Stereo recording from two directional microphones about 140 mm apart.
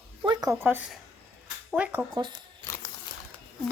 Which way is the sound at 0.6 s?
15° right (ahead or behind).